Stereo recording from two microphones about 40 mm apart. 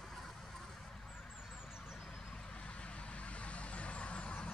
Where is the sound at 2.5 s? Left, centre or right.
Left.